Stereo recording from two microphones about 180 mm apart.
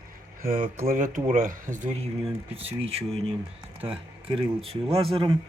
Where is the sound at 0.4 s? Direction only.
45° right (ahead or behind).